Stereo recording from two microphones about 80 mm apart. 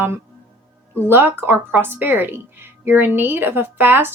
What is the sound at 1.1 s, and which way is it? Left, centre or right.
A woman's voice, right.